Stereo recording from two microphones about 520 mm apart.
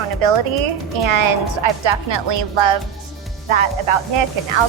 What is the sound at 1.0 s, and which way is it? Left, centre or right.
A woman's voice, right.